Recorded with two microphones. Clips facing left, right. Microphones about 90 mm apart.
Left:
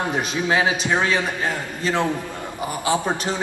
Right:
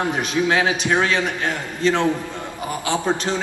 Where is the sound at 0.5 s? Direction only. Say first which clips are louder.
Left 1 dB; 15° left (ahead or behind).